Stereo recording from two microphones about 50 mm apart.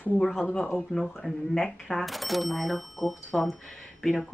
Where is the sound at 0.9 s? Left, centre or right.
Centre.